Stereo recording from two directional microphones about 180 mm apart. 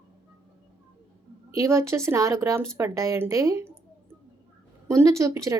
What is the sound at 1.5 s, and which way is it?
Speech, 15° right (ahead or behind).